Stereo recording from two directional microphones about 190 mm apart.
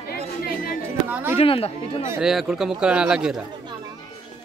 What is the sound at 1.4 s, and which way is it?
Speech, 30° left (ahead or behind).